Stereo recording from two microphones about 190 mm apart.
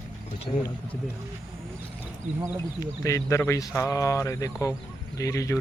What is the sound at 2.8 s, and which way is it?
Speech, 15° left (ahead or behind).